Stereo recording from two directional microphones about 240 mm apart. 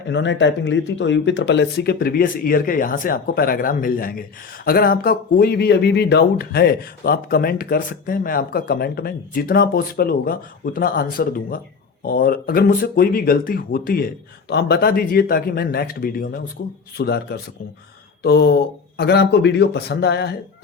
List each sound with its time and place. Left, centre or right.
0.1 s speech: left